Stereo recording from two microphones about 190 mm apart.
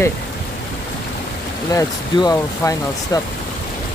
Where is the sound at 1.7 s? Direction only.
15° left (ahead or behind).